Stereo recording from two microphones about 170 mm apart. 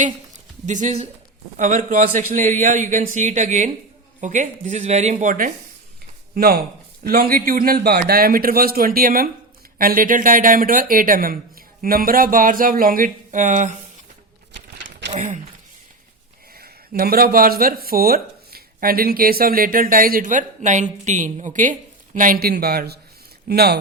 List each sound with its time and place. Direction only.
0.6 s a man's voice: 45° right (ahead or behind)
6.3 s speech: 65° right (ahead or behind); by 13.7 s 45° right (ahead or behind)
15.1 s speech: 45° right (ahead or behind)
16.6 s speech: 65° right (ahead or behind)